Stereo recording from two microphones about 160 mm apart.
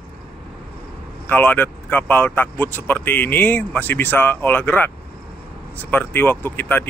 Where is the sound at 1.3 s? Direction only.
10° left (ahead or behind).